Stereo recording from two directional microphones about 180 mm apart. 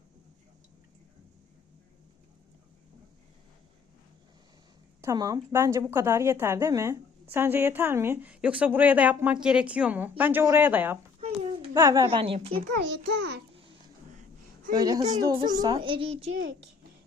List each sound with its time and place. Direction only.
4.9 s a woman's voice: 20° right (ahead or behind)
12.0 s a woman's voice: 30° right (ahead or behind)
12.7 s a child's voice: 70° right (ahead or behind)
13.5 s babbling: 30° right (ahead or behind)
14.8 s a child's voice: 20° right (ahead or behind)